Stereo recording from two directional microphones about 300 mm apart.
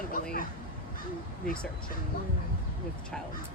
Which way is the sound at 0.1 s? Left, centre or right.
Left.